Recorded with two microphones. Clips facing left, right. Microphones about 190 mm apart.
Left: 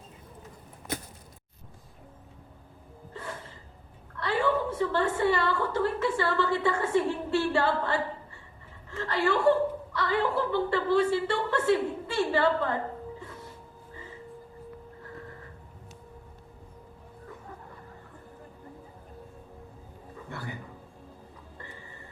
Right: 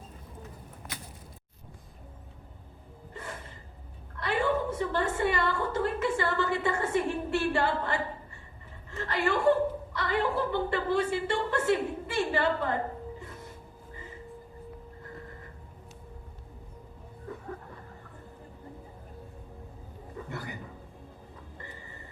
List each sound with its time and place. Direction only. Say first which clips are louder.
3.1 s gasp: left 2 dB; 15° right (ahead or behind)
4.2 s a woman's voice: left 1 dB; 15° right (ahead or behind)